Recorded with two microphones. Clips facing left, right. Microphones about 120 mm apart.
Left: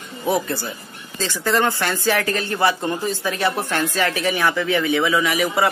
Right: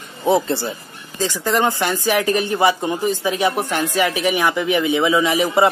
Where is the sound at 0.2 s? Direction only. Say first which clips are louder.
Right 4 dB; 25° right (ahead or behind).